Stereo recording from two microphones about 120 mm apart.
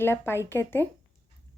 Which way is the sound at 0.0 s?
20° left (ahead or behind).